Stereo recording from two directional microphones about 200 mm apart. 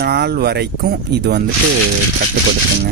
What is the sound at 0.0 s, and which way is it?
A man's voice, 55° right (ahead or behind).